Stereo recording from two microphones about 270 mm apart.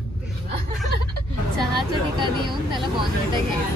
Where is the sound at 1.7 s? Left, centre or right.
Centre.